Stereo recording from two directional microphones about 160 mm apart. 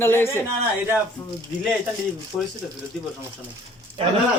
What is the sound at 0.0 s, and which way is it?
Speech, 15° left (ahead or behind).